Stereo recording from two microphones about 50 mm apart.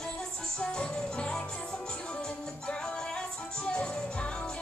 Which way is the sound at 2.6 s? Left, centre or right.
Centre.